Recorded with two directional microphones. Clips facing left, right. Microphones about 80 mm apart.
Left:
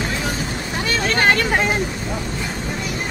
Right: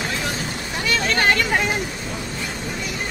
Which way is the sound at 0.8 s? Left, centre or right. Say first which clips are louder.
Left 1 dB; left.